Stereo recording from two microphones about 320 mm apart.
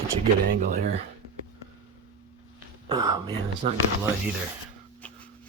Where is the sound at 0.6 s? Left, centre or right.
Right.